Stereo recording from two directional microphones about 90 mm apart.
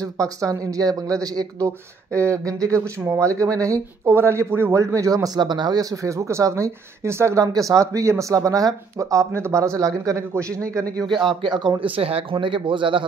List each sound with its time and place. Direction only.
0.0 s speech: 40° right (ahead or behind)
11.1 s speech: 60° right (ahead or behind)